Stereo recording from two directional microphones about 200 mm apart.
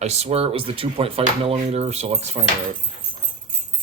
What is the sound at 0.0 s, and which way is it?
Speech, 35° right (ahead or behind).